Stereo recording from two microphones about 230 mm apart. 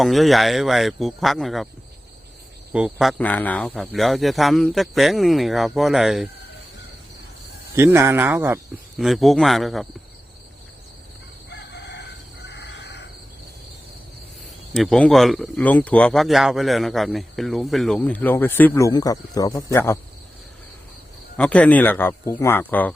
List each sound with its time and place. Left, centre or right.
0.0 s speech: centre
2.7 s speech: centre
7.8 s speech: centre
11.5 s chicken: left
14.7 s speech: centre
21.3 s speech: centre